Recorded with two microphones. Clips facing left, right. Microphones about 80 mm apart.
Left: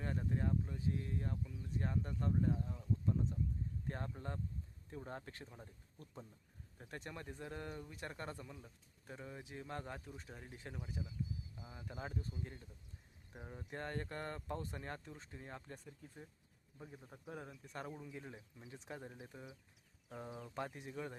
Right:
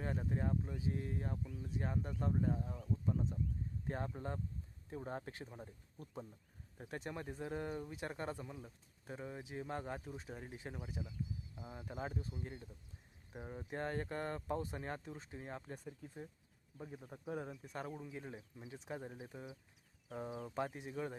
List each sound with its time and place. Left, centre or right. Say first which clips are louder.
0.0 s speech: right 1 dB; centre
17.7 s speech: right 1 dB; centre
18.3 s speech: right 4 dB; right
18.7 s speech: right 3 dB; centre